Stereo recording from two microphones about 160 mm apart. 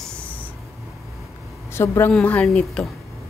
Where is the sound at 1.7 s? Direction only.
15° left (ahead or behind).